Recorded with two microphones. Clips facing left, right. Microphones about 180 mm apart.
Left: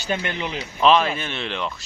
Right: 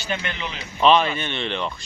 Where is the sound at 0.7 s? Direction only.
Centre (ahead or behind).